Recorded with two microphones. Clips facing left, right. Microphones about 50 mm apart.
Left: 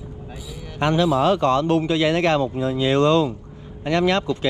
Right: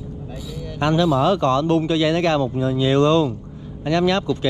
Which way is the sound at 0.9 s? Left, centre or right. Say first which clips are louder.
Right 1 dB; left.